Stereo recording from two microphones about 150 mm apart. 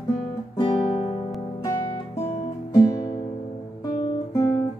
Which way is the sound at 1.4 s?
25° left (ahead or behind).